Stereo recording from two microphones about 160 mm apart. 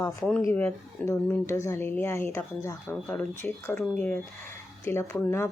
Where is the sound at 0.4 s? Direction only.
15° left (ahead or behind).